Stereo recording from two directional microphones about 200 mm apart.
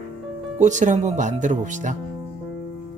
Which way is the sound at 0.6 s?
40° right (ahead or behind).